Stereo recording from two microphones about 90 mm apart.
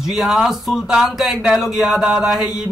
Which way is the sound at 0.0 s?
5° right (ahead or behind).